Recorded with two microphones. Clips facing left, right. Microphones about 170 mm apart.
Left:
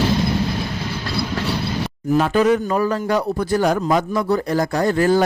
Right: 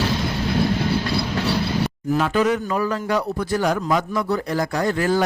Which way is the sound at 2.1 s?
40° left (ahead or behind).